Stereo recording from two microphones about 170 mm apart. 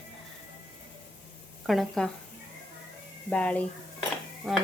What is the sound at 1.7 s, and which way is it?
Speech, centre (ahead or behind).